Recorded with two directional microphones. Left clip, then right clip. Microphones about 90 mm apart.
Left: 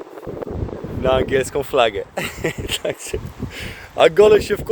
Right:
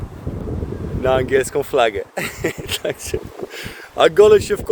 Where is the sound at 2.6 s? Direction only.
40° right (ahead or behind).